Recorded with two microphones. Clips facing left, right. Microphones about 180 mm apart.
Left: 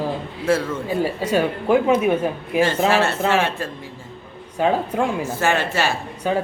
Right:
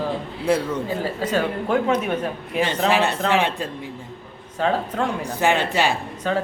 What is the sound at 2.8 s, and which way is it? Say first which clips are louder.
Speech: left 1 dB; 15° right (ahead or behind).